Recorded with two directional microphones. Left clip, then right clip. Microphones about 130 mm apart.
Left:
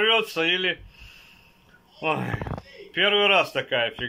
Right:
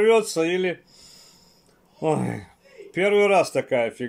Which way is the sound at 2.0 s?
40° right (ahead or behind).